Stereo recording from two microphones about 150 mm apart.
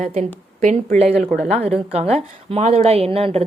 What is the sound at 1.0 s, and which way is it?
Speech, centre (ahead or behind).